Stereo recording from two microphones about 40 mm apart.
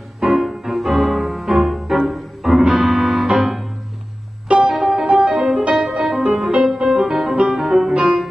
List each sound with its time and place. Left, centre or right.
0.2 s music: centre
7.3 s music: centre
7.6 s music: centre